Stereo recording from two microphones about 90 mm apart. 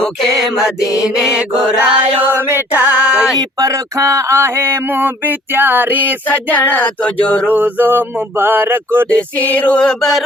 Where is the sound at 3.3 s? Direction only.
35° right (ahead or behind); by 6.0 s 20° right (ahead or behind).